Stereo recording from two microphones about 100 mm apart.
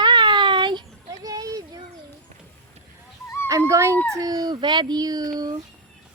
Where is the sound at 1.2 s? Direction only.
35° right (ahead or behind).